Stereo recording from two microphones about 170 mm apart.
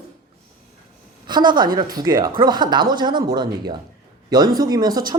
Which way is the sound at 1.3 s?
25° right (ahead or behind).